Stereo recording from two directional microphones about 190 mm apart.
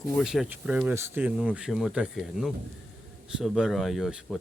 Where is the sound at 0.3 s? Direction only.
5° right (ahead or behind).